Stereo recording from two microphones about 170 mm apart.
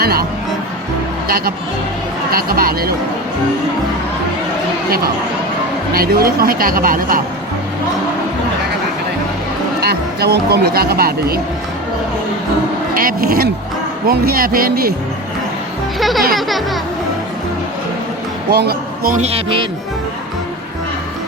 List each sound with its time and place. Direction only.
0.0 s music: 65° right (ahead or behind)
2.3 s speech: 60° right (ahead or behind)
5.9 s speech: 60° right (ahead or behind)
9.8 s speech: 70° right (ahead or behind)
12.9 s speech: 60° right (ahead or behind)
16.0 s speech: centre (ahead or behind)
18.5 s speech: 70° right (ahead or behind)
19.2 s speech: 30° right (ahead or behind)